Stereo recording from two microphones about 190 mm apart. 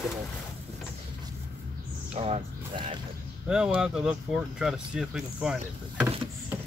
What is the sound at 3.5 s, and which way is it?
Speech, 5° right (ahead or behind).